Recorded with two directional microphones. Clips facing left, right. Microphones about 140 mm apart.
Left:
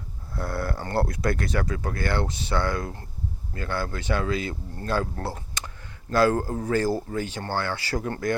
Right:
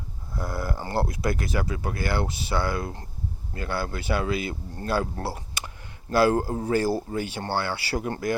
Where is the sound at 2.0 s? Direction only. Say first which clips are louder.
Even; 5° right (ahead or behind).